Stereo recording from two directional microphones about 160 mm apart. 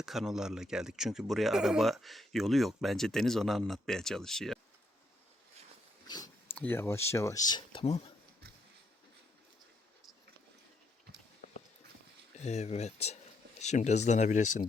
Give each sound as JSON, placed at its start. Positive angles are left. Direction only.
{"t": 0.0, "sound": "speech", "side_deg": 0}
{"t": 6.1, "sound": "a sound", "side_deg": 25}
{"t": 6.5, "sound": "speech", "side_deg": 15}
{"t": 12.4, "sound": "speech", "side_deg": 45}